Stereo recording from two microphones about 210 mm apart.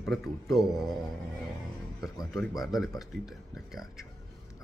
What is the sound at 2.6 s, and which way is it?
Speech, centre (ahead or behind).